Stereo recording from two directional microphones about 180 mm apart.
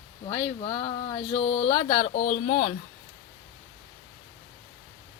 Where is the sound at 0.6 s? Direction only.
30° left (ahead or behind); by 2.7 s 50° left (ahead or behind).